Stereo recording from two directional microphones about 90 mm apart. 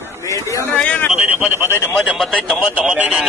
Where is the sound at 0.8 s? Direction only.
15° left (ahead or behind).